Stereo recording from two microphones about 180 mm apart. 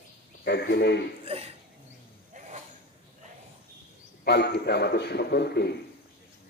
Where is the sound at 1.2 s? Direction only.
35° right (ahead or behind).